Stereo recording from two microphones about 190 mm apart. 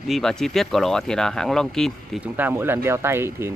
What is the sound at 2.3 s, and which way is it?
Speech, 10° right (ahead or behind).